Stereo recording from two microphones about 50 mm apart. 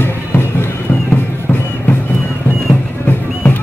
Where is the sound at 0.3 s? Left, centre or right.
Left.